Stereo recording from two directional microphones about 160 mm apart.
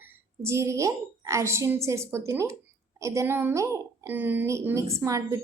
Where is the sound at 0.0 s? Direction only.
15° right (ahead or behind).